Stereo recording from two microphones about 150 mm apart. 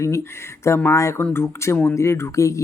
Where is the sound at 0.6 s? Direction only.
20° left (ahead or behind).